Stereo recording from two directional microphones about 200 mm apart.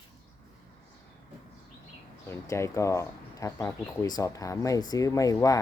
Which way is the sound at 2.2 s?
15° left (ahead or behind).